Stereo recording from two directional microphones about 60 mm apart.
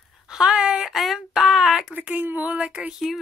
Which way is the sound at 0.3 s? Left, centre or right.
Centre.